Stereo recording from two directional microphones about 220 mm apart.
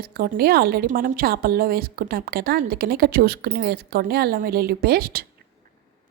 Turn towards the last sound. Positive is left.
turn(degrees=-45)  # may be behind; listen again after turning